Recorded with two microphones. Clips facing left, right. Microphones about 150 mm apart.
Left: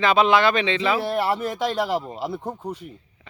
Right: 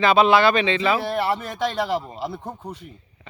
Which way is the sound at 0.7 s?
10° right (ahead or behind).